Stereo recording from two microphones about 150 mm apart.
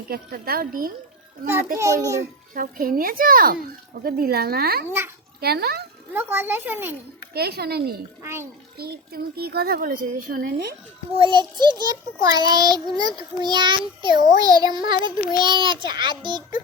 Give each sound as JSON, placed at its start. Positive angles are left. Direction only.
{"t": 0.1, "sound": "a child's voice", "side_deg": -80}
{"t": 1.8, "sound": "a child's voice", "side_deg": -20}
{"t": 2.6, "sound": "a child's voice", "side_deg": -70}
{"t": 4.9, "sound": "a child's voice", "side_deg": -15}
{"t": 5.4, "sound": "a child's voice", "side_deg": -90}
{"t": 6.1, "sound": "a child's voice", "side_deg": -15}
{"t": 7.3, "sound": "a child's voice", "side_deg": -90}
{"t": 8.2, "sound": "a child's voice", "side_deg": -15}
{"t": 8.8, "sound": "a child's voice", "side_deg": -90}
{"t": 11.2, "sound": "a child's voice", "side_deg": -30}